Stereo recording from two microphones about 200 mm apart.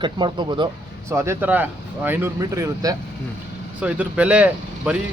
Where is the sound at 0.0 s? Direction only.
25° right (ahead or behind).